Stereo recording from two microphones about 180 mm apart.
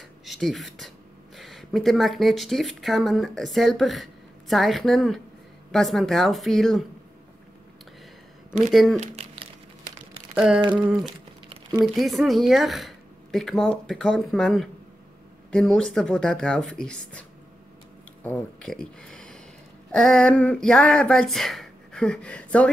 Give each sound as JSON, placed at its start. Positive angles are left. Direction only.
{"t": 0.2, "sound": "speech", "side_deg": 0}
{"t": 8.9, "sound": "a sound", "side_deg": -35}
{"t": 10.3, "sound": "humming", "side_deg": -5}
{"t": 10.7, "sound": "speech", "side_deg": -5}